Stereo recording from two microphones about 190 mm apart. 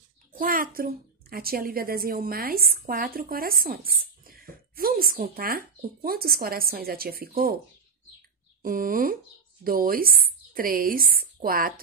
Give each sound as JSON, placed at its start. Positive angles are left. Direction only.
{"t": 0.3, "sound": "speech", "side_deg": -50}
{"t": 8.6, "sound": "speech", "side_deg": -45}